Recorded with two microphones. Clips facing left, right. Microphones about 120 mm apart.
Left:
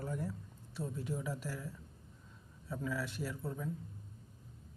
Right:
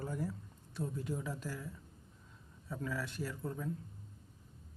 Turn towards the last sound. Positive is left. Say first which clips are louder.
# even
turn(degrees=5)  # may be behind; listen again after turning